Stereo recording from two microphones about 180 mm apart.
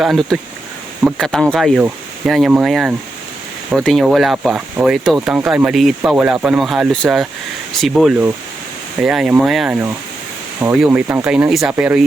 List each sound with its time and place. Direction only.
0.0 s speech: centre (ahead or behind)